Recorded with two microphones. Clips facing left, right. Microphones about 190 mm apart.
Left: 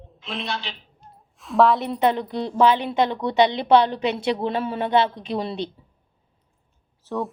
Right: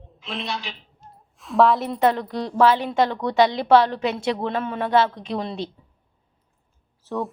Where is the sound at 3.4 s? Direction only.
25° left (ahead or behind).